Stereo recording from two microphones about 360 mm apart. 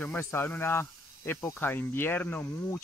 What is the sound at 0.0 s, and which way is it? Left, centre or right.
Speech, centre.